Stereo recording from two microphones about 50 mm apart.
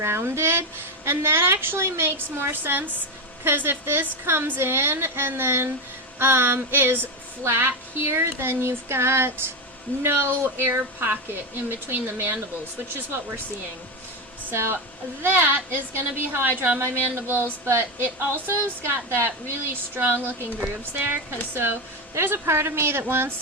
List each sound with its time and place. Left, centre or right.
0.0 s a woman's voice: right
14.5 s speech: right
15.2 s a woman's voice: right
22.1 s speech: right